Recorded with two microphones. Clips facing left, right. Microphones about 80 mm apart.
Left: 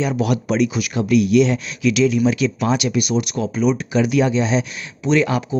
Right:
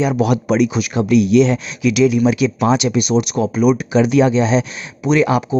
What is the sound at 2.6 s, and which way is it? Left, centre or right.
Speech, right.